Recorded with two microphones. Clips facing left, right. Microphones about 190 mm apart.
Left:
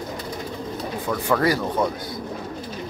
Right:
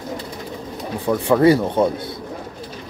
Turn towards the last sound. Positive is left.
turn(degrees=-25)  # may be behind; listen again after turning